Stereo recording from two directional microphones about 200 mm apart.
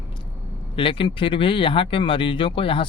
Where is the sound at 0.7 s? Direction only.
25° left (ahead or behind).